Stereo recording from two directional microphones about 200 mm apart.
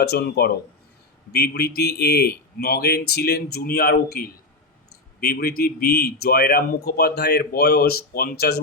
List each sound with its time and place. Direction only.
0.0 s speech: 55° left (ahead or behind)